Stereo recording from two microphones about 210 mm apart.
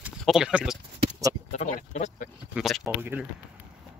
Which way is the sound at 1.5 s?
35° left (ahead or behind).